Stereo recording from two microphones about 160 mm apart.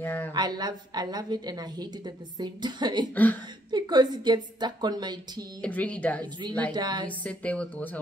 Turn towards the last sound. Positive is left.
turn(degrees=10)  # may be behind; listen again after turning